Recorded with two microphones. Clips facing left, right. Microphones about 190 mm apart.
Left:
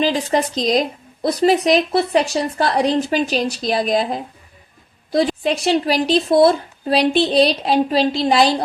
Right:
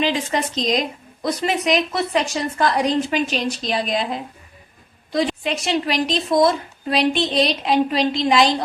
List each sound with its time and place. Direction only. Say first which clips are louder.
0.0 s a woman's voice: left 3 dB; 35° left (ahead or behind)